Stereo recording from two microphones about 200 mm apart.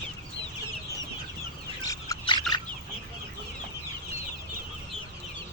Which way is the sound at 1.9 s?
20° left (ahead or behind).